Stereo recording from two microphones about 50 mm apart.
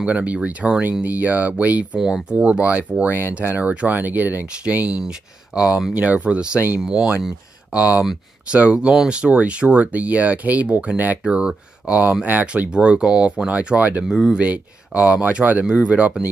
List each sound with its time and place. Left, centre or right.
0.0 s speech: right
2.0 s speech: centre
2.3 s speech: right
5.0 s speech: centre
5.9 s speech: right
11.2 s speech: centre
12.0 s speech: right
12.6 s speech: right
14.0 s speech: centre
14.4 s speech: right